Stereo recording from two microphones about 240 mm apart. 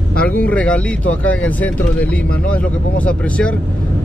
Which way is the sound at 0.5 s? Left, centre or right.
Centre.